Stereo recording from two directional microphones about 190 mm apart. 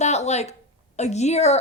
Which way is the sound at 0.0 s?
35° left (ahead or behind).